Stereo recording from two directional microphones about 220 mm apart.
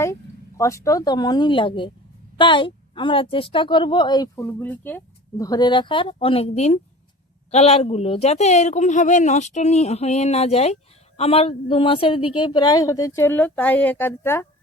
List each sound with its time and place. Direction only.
0.0 s a woman's voice: 15° left (ahead or behind)